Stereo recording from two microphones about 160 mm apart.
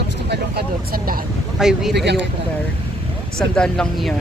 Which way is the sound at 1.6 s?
5° right (ahead or behind).